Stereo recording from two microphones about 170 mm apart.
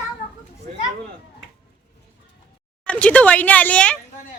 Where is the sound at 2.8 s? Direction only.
5° left (ahead or behind).